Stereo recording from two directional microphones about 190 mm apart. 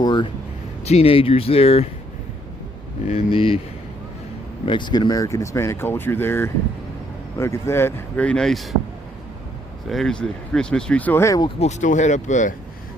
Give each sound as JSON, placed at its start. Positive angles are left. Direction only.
{"t": 0.0, "sound": "speech", "side_deg": 25}
{"t": 3.1, "sound": "speech", "side_deg": 30}
{"t": 4.6, "sound": "speech", "side_deg": 25}
{"t": 9.8, "sound": "speech", "side_deg": 0}
{"t": 11.6, "sound": "speech", "side_deg": 40}